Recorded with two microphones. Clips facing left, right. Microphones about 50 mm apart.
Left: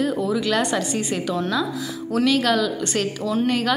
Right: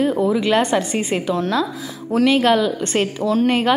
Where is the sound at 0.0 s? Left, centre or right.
Right.